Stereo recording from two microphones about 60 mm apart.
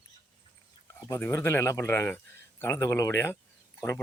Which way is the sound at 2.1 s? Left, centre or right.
Left.